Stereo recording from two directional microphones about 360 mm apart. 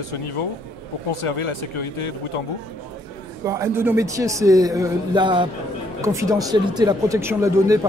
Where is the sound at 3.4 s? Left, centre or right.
Centre.